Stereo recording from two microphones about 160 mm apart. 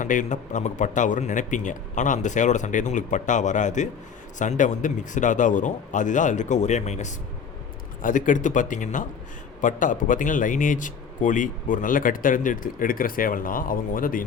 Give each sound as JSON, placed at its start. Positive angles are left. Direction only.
{"t": 0.0, "sound": "a man's voice", "side_deg": 55}